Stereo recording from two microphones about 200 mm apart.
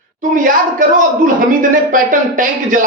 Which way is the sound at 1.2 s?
40° right (ahead or behind).